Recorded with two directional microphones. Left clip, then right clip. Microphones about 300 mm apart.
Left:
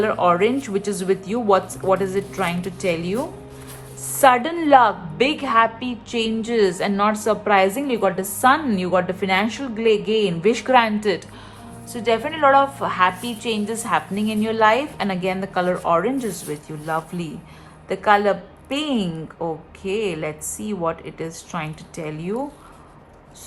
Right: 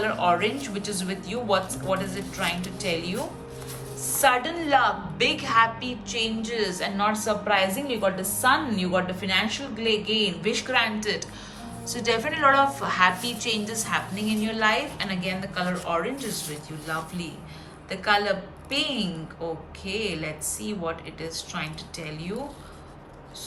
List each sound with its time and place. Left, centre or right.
0.0 s a woman's voice: centre
4.2 s a woman's voice: centre
17.8 s a woman's voice: centre
20.1 s a woman's voice: centre